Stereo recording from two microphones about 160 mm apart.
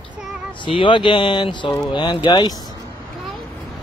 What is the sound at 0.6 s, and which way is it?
Speech, 30° left (ahead or behind).